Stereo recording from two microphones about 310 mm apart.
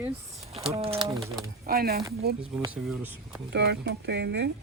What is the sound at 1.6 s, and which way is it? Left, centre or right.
Speech, right.